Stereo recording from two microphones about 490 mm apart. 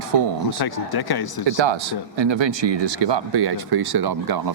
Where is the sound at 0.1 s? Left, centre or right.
Right.